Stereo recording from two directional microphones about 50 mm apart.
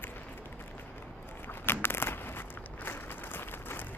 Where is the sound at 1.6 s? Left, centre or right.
Left.